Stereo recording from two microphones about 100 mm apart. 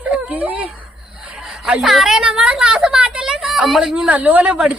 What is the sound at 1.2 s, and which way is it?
A woman's voice, 10° right (ahead or behind).